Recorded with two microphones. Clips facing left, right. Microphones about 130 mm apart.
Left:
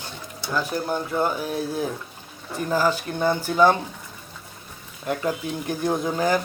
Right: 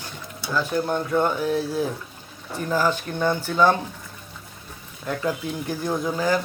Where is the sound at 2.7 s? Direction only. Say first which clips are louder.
Even; 10° left (ahead or behind).